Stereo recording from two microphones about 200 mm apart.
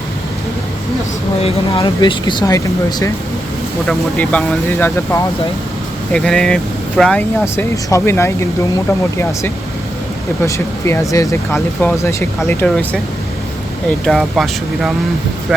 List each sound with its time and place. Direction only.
1.4 s speech: 30° left (ahead or behind)
3.8 s speech: 5° left (ahead or behind)
6.1 s speech: 5° left (ahead or behind)
10.4 s speech: 15° left (ahead or behind)
14.0 s speech: centre (ahead or behind)